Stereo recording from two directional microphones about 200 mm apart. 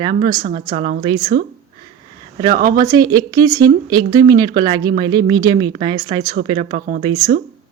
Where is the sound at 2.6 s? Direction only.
50° right (ahead or behind).